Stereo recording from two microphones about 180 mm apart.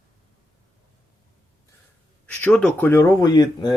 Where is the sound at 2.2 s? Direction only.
10° left (ahead or behind).